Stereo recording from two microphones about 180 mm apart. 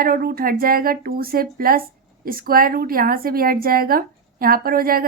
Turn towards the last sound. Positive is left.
turn(degrees=-55)  # may be behind; listen again after turning